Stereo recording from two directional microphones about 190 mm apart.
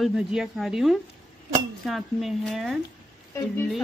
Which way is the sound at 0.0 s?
Centre (ahead or behind).